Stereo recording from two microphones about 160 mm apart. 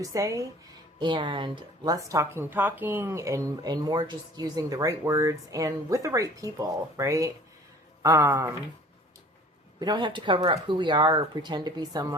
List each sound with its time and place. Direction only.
0.0 s speech: 20° right (ahead or behind)
9.8 s speech: 25° right (ahead or behind)